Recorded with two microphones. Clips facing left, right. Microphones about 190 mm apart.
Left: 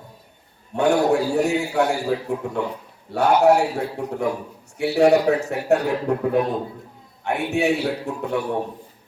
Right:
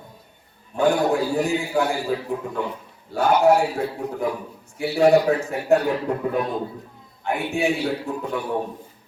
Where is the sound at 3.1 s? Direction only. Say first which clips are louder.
Left 1 dB; 70° left (ahead or behind).